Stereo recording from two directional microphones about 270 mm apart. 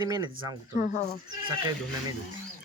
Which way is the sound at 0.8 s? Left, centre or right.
Left.